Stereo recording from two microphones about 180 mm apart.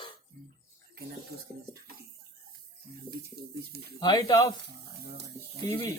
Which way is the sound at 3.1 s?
60° right (ahead or behind).